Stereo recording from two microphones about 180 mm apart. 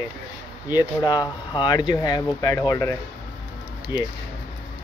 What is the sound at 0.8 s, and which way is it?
Speech, 20° left (ahead or behind).